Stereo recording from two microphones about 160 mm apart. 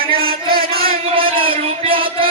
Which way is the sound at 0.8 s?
35° right (ahead or behind).